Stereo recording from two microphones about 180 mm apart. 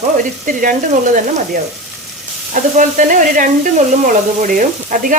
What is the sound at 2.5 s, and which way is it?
Speech, 45° right (ahead or behind).